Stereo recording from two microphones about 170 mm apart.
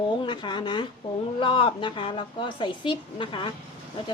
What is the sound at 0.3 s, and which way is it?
A woman's voice, 25° left (ahead or behind).